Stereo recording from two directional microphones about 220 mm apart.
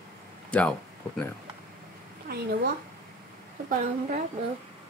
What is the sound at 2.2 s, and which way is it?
Speech, 45° right (ahead or behind).